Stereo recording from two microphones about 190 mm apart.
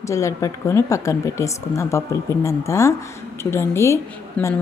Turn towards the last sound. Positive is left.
turn(degrees=15)  # may be behind; listen again after turning